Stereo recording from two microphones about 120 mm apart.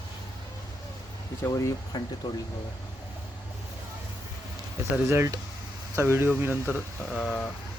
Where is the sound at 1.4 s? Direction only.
30° left (ahead or behind).